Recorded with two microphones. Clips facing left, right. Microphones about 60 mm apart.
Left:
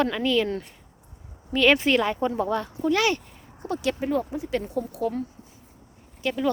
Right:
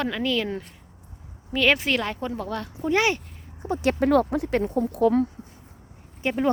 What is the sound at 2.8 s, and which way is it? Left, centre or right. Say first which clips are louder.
Speech: right 1 dB; right.